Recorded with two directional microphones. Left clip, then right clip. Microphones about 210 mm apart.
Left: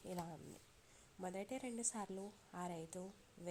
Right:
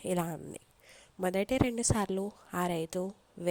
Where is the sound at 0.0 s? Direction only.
50° right (ahead or behind).